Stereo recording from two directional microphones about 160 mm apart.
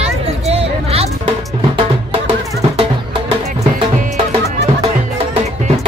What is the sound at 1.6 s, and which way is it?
Music, 35° right (ahead or behind).